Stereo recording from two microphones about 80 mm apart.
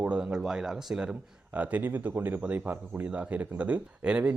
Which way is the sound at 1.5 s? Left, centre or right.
Right.